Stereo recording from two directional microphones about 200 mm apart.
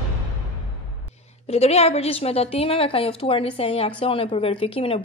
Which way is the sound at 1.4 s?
30° left (ahead or behind).